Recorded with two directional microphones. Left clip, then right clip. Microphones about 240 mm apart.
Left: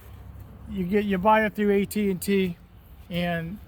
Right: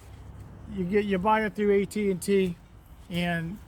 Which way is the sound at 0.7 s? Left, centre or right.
Left.